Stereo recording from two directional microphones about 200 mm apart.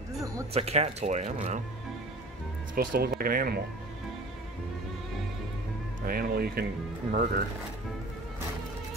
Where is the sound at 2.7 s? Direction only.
45° right (ahead or behind).